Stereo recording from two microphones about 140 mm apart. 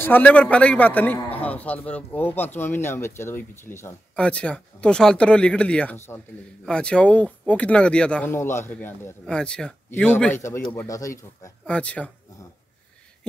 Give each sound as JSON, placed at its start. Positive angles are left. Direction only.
{"t": 0.0, "sound": "a man's voice", "side_deg": 10}
{"t": 11.6, "sound": "a man's voice", "side_deg": 10}